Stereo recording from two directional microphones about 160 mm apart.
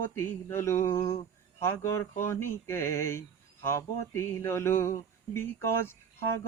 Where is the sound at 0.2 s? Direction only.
15° left (ahead or behind).